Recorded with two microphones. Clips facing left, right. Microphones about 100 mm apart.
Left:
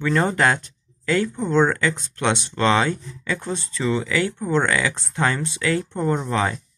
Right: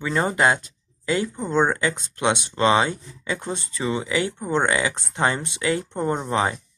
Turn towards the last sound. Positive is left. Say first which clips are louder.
# left 1 dB
turn(degrees=-20)  # may be behind; listen again after turning